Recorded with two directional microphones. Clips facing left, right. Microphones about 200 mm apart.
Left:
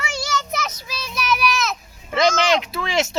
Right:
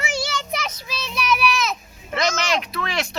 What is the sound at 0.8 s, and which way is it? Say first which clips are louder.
Child singing: right 1 dB; centre (ahead or behind).